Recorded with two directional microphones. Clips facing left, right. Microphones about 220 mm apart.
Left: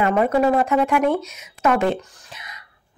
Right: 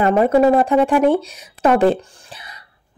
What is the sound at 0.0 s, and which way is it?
Speech, 35° right (ahead or behind).